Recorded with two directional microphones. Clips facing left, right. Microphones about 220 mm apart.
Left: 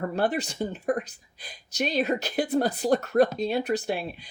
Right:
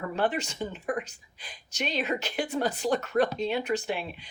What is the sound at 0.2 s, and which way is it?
Speech, 35° left (ahead or behind).